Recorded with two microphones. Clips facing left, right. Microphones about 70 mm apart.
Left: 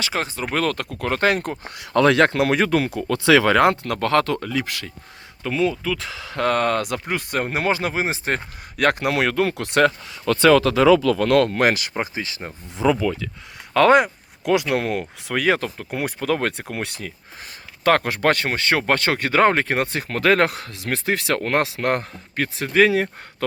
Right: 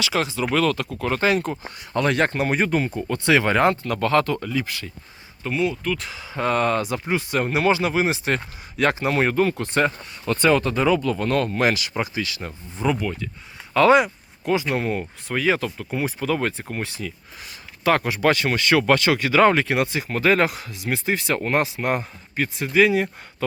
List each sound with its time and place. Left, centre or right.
0.0 s speech: left
0.5 s speech: left
1.7 s speech: left
3.9 s speech: left
6.1 s speech: left
8.7 s speech: left
12.1 s speech: left
12.6 s speech: left
13.7 s speech: left
14.4 s speech: left
17.8 s speech: left